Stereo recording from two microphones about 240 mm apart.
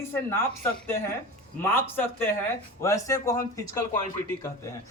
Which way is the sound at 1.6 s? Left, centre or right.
Centre.